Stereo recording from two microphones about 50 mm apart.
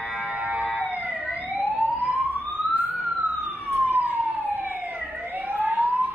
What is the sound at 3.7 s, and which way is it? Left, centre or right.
Emergency vehicle, right.